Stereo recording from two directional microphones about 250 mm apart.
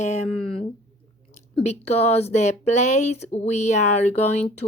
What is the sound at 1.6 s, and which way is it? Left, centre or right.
Speech, left.